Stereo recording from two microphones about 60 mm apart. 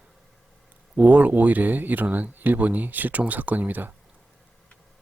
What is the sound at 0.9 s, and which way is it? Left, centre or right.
Speech, right.